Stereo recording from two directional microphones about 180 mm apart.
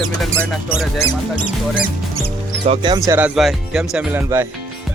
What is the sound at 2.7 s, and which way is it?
Speech, 25° right (ahead or behind).